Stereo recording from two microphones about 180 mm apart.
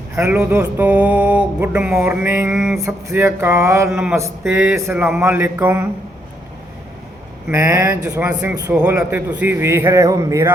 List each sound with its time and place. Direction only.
0.2 s music: 10° right (ahead or behind)
2.8 s music: 15° right (ahead or behind)
4.4 s a man's voice: 5° right (ahead or behind)
4.8 s music: 10° right (ahead or behind)
7.5 s music: 15° right (ahead or behind)
8.4 s speech: 20° right (ahead or behind)
8.7 s a man's voice: 5° right (ahead or behind)
9.0 s music: 10° right (ahead or behind)